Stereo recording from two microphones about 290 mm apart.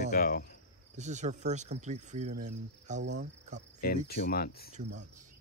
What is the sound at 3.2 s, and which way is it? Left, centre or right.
Cricket, right.